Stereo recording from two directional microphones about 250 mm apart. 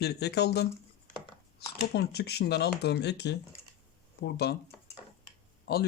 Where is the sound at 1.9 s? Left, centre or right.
Left.